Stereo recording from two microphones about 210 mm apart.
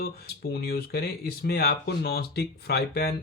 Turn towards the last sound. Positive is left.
turn(degrees=50)  # may be behind; listen again after turning